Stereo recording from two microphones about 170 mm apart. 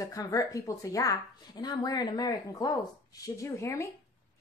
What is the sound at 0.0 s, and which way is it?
A woman's voice, 20° left (ahead or behind).